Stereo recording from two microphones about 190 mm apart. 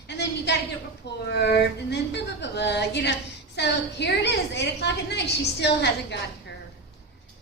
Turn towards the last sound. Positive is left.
turn(degrees=65)  # may be behind; listen again after turning